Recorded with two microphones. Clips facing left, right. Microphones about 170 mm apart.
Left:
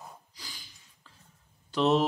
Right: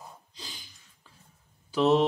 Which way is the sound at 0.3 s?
20° right (ahead or behind).